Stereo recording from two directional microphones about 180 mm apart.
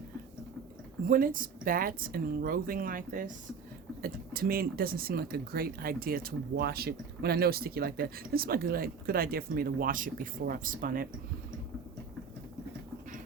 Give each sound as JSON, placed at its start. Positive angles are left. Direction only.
{"t": 1.0, "sound": "speech", "side_deg": -50}